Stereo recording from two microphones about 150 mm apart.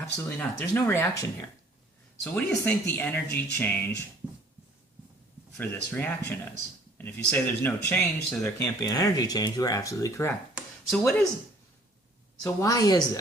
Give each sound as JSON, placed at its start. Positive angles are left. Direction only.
{"t": 0.2, "sound": "speech", "side_deg": 10}
{"t": 2.5, "sound": "speech", "side_deg": 10}
{"t": 4.2, "sound": "a sound", "side_deg": -5}
{"t": 5.5, "sound": "speech", "side_deg": 10}
{"t": 10.5, "sound": "a sound", "side_deg": 0}
{"t": 12.4, "sound": "speech", "side_deg": 20}